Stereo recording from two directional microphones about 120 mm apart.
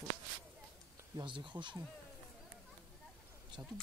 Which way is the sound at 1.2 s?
40° right (ahead or behind).